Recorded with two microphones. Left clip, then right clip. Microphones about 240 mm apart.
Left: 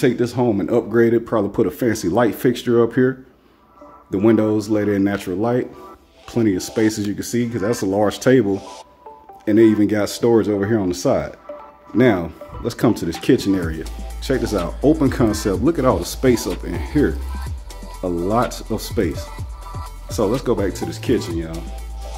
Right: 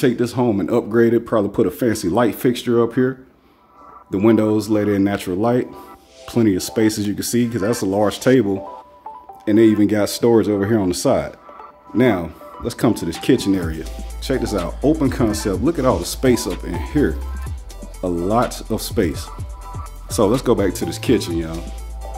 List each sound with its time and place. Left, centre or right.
0.0 s speech: centre
18.5 s speech: centre
20.1 s speech: right